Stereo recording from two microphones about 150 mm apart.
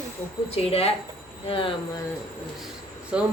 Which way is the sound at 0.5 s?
40° left (ahead or behind).